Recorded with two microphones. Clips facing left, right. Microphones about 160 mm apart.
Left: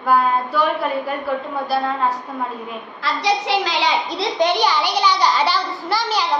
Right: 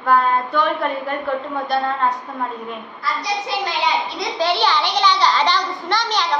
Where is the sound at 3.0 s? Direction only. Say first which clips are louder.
Left 4 dB; 90° left.